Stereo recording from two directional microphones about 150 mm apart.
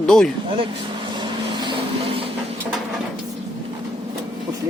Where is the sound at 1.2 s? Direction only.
35° right (ahead or behind).